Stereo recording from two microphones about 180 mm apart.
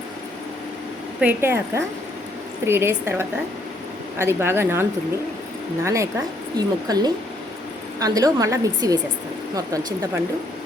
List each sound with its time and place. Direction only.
1.2 s a woman's voice: 10° right (ahead or behind)